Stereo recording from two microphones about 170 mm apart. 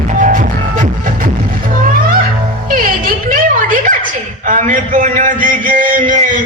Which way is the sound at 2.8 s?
50° right (ahead or behind).